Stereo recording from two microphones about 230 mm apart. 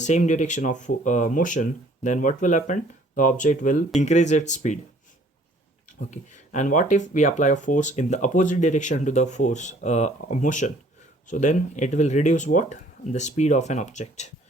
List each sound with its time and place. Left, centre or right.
0.0 s speech: left
6.1 s speech: left